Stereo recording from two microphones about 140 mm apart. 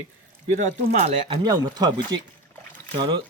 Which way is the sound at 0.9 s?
50° right (ahead or behind).